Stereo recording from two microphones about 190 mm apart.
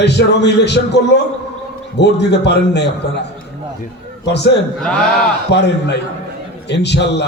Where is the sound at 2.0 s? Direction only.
65° left (ahead or behind).